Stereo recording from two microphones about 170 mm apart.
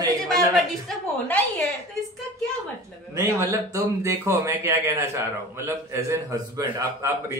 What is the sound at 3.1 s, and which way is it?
Speech, 20° right (ahead or behind).